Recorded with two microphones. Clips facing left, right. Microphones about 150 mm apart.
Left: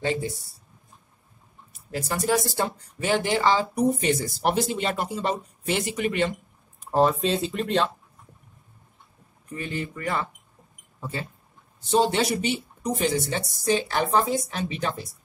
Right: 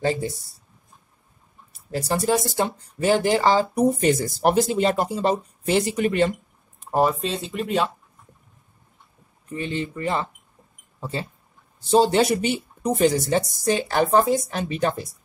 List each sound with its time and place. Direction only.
0.0 s speech: 40° right (ahead or behind)
1.7 s speech: 35° right (ahead or behind)
3.0 s speech: 40° right (ahead or behind)
6.9 s speech: 10° right (ahead or behind)
7.2 s speech: centre (ahead or behind)
9.5 s speech: 25° right (ahead or behind); by 15.0 s 45° right (ahead or behind)